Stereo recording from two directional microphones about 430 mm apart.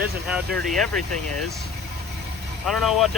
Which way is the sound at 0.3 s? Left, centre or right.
Centre.